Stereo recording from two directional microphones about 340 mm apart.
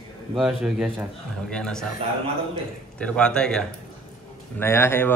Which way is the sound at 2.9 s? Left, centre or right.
Centre.